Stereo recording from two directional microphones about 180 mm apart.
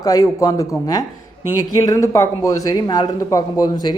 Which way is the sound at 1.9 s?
15° left (ahead or behind).